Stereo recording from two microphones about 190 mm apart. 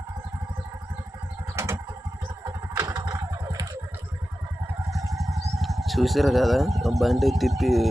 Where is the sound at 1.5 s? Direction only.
15° right (ahead or behind).